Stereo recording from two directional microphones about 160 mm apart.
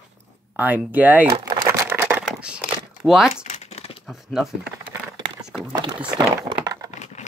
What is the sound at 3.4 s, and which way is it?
Crumpling, 45° left (ahead or behind).